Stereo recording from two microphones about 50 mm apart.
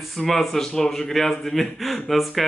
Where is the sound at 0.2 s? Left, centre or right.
Centre.